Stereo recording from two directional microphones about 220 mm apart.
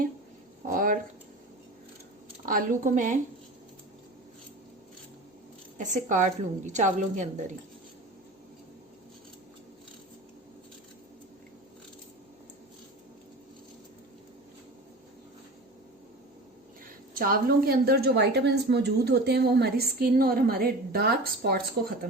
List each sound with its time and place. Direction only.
0.7 s a sound: 40° right (ahead or behind)
2.5 s a woman's voice: 40° right (ahead or behind)
5.7 s a woman's voice: 35° right (ahead or behind)
17.2 s a woman's voice: 40° right (ahead or behind)